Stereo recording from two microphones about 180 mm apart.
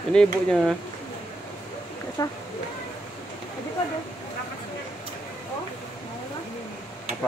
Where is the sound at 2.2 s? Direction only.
20° left (ahead or behind).